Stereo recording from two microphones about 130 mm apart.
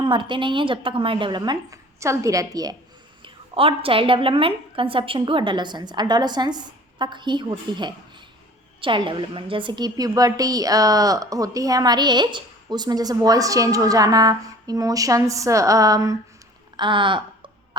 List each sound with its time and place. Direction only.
0.0 s a woman's voice: 40° right (ahead or behind)
3.2 s a woman's voice: 45° right (ahead or behind); by 16.1 s 25° right (ahead or behind)
16.7 s speech: 40° right (ahead or behind)